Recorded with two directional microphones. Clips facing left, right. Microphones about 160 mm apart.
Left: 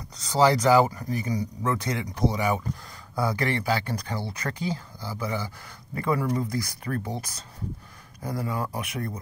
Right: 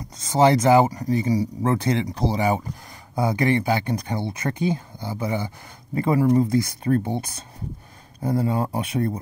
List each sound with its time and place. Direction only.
0.2 s speech: 25° right (ahead or behind)